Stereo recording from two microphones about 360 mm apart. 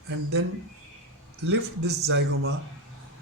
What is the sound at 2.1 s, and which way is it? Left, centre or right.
Speech, right.